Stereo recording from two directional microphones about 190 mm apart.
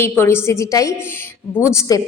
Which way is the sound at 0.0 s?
10° left (ahead or behind).